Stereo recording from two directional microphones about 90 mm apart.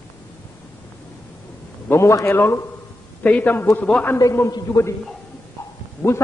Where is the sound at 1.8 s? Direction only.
30° left (ahead or behind).